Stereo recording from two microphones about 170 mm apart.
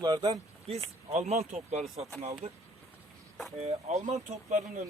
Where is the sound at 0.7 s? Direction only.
40° right (ahead or behind).